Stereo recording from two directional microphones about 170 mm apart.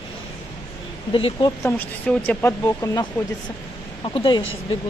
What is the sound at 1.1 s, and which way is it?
Speech, 30° left (ahead or behind).